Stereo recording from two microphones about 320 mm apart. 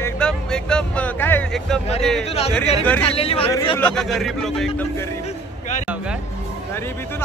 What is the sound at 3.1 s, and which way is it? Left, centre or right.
Speech, centre.